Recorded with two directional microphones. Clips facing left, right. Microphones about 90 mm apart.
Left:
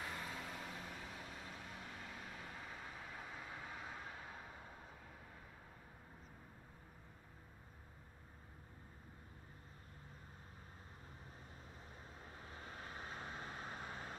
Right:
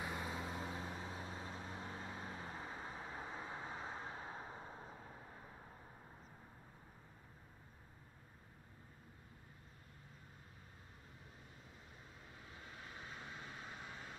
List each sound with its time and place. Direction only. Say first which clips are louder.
0.0 s vehicle: right 3 dB; 20° right (ahead or behind)
12.4 s vehicle: left 3 dB; 40° left (ahead or behind)